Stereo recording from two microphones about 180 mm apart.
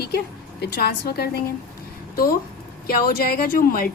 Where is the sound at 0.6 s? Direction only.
65° left (ahead or behind).